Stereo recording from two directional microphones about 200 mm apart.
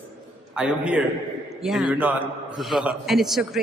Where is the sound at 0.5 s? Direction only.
5° right (ahead or behind).